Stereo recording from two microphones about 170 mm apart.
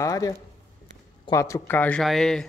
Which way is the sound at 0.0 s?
20° left (ahead or behind).